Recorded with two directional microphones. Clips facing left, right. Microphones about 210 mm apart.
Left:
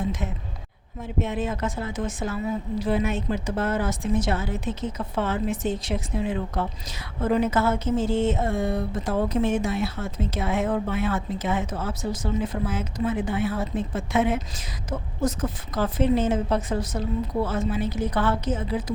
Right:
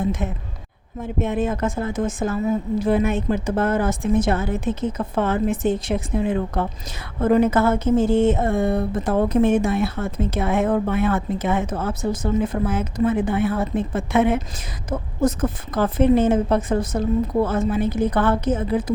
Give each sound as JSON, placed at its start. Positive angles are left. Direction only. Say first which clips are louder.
{"t": 0.0, "sound": "a woman's voice", "louder": "right 5 dB", "side_deg": -50}